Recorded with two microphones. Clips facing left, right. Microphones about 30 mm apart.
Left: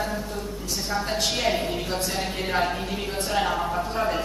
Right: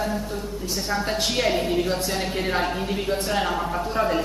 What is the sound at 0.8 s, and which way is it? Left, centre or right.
A man's voice, centre.